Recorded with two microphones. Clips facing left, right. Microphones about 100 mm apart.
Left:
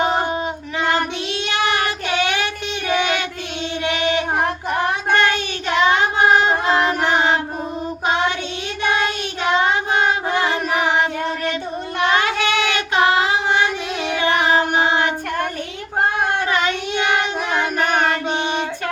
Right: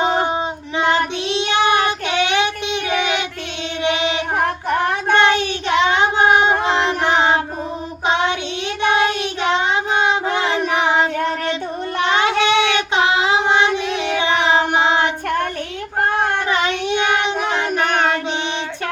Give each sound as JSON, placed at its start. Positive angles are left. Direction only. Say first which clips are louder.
{"t": 0.0, "sound": "child singing", "louder": "right 1 dB", "side_deg": -20}
{"t": 5.1, "sound": "child singing", "louder": "right 4 dB", "side_deg": -25}
{"t": 10.0, "sound": "child singing", "louder": "right 1 dB", "side_deg": -25}
{"t": 12.1, "sound": "child singing", "louder": "right 5 dB", "side_deg": -25}
{"t": 14.4, "sound": "music", "louder": "right 1 dB", "side_deg": -25}